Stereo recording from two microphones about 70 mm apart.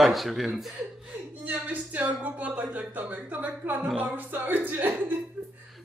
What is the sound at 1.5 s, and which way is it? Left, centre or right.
Speech, right.